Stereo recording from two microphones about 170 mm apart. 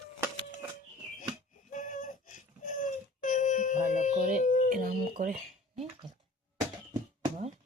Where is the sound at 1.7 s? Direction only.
50° left (ahead or behind).